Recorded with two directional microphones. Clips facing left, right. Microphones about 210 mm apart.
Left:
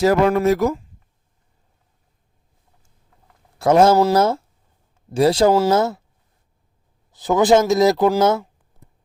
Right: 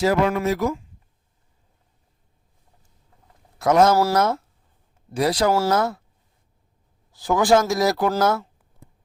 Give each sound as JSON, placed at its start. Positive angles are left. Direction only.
{"t": 0.0, "sound": "speech", "side_deg": 45}
{"t": 3.6, "sound": "speech", "side_deg": 30}
{"t": 7.1, "sound": "speech", "side_deg": 20}